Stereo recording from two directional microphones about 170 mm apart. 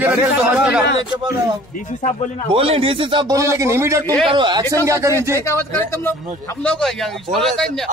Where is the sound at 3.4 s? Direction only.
15° right (ahead or behind).